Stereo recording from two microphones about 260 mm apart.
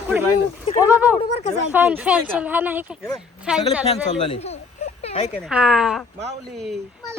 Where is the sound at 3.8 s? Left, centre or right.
Left.